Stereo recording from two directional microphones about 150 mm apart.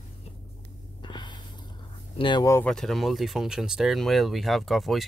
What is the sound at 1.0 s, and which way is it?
Gasp, 30° left (ahead or behind).